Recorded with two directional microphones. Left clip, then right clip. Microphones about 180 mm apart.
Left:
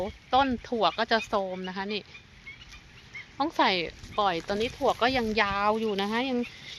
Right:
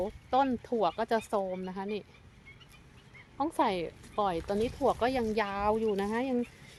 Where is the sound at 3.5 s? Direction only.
5° left (ahead or behind).